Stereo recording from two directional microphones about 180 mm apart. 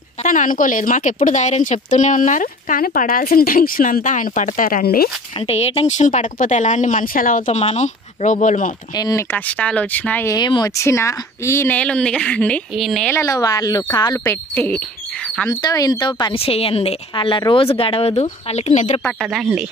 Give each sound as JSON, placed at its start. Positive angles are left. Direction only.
{"t": 0.2, "sound": "speech", "side_deg": 45}
{"t": 5.5, "sound": "speech", "side_deg": 35}
{"t": 8.9, "sound": "speech", "side_deg": 20}
{"t": 10.3, "sound": "speech", "side_deg": 25}
{"t": 13.1, "sound": "speech", "side_deg": 15}
{"t": 15.6, "sound": "a woman's voice", "side_deg": 20}
{"t": 19.0, "sound": "speech", "side_deg": -5}